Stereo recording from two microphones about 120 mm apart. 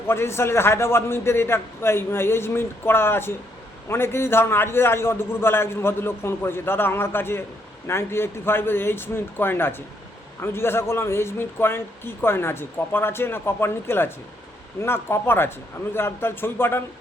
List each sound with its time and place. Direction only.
0.1 s speech: 20° left (ahead or behind)